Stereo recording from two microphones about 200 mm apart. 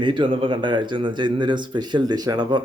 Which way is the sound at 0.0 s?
25° right (ahead or behind).